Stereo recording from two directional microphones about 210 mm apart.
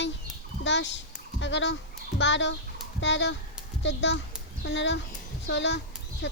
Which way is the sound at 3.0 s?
60° left (ahead or behind).